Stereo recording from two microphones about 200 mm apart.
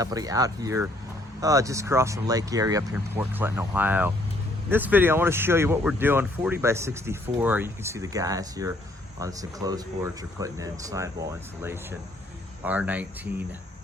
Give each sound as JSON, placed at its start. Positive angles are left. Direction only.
{"t": 0.0, "sound": "speech", "side_deg": -15}